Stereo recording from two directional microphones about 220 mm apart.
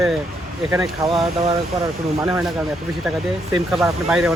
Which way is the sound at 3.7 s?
Centre (ahead or behind).